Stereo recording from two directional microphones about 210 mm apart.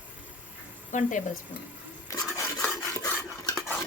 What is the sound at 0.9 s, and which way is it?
Speech, 35° left (ahead or behind).